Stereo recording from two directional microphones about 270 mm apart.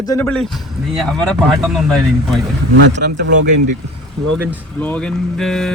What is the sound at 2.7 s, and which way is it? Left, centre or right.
Speech, right.